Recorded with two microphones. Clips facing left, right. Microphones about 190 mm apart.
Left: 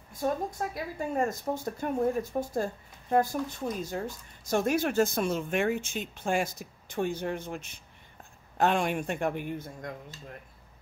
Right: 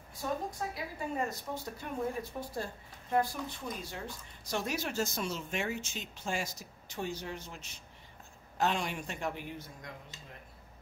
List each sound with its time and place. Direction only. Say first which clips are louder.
0.2 s a woman's voice: left 6 dB; 50° left (ahead or behind)